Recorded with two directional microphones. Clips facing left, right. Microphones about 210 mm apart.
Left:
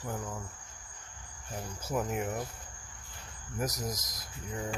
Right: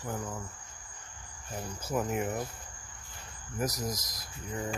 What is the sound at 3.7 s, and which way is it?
Speech, 20° left (ahead or behind).